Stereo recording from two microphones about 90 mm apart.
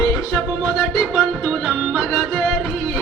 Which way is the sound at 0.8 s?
5° left (ahead or behind).